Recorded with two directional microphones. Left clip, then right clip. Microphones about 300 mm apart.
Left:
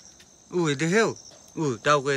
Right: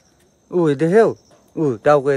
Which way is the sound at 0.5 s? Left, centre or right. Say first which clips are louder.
Right 9 dB; centre.